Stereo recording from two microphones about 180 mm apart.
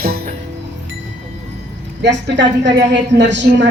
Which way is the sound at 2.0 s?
75° right (ahead or behind).